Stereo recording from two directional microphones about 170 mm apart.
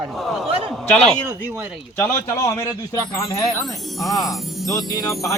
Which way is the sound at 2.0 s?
15° left (ahead or behind).